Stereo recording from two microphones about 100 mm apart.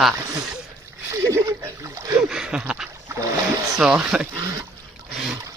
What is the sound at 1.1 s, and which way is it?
Speech, 30° right (ahead or behind).